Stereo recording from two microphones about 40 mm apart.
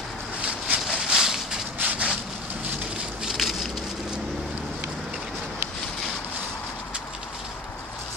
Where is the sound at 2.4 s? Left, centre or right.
Right.